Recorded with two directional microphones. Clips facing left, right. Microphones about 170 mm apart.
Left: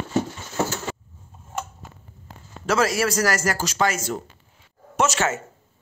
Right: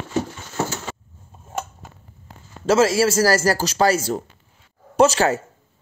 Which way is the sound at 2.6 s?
25° right (ahead or behind).